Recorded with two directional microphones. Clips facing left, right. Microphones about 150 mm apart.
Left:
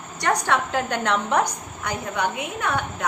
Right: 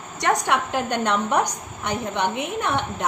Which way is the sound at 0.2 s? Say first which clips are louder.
Right 1 dB; 20° right (ahead or behind).